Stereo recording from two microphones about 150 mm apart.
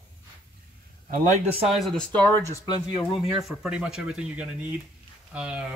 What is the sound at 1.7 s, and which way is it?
Speech, 5° left (ahead or behind).